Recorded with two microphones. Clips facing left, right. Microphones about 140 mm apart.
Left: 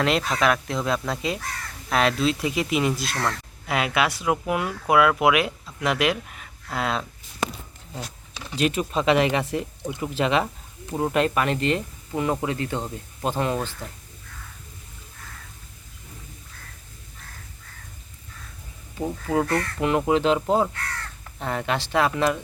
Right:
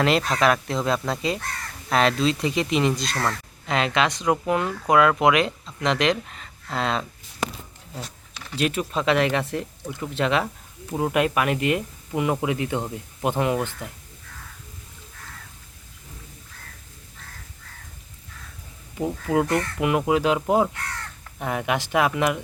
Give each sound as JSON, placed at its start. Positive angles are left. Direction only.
{"t": 0.0, "sound": "speech", "side_deg": 0}
{"t": 8.3, "sound": "a sound", "side_deg": 15}
{"t": 8.5, "sound": "speech", "side_deg": 0}
{"t": 9.8, "sound": "speech", "side_deg": 15}
{"t": 10.2, "sound": "speech", "side_deg": 0}
{"t": 18.9, "sound": "speech", "side_deg": -15}